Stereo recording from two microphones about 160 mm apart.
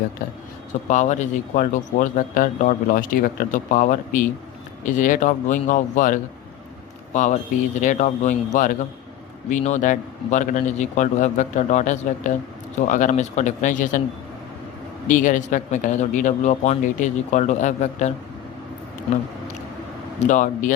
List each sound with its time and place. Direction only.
0.7 s a man's voice: 50° left (ahead or behind)
15.0 s speech: 55° left (ahead or behind)
20.2 s speech: 50° left (ahead or behind)